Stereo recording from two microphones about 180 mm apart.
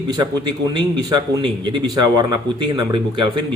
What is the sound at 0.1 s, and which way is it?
A man's voice, 25° right (ahead or behind).